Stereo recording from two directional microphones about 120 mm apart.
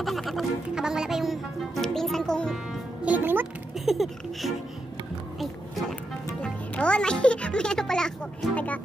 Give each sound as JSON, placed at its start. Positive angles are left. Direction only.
{"t": 0.0, "sound": "music", "side_deg": 0}
{"t": 3.1, "sound": "music", "side_deg": -15}
{"t": 3.7, "sound": "a sound", "side_deg": 0}
{"t": 6.4, "sound": "music", "side_deg": 10}